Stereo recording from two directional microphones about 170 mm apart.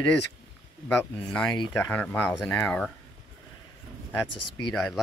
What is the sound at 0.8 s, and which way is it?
Speech, 5° left (ahead or behind).